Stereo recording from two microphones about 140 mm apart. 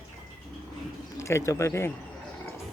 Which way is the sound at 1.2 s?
20° left (ahead or behind).